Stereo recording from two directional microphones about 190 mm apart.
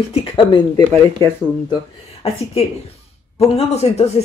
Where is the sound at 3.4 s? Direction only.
35° left (ahead or behind).